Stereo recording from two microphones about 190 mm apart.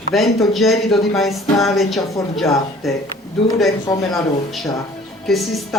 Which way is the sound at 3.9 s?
20° left (ahead or behind).